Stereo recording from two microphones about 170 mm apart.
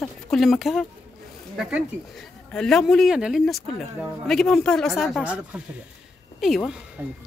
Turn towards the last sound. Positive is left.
turn(degrees=-5)  # may be behind; listen again after turning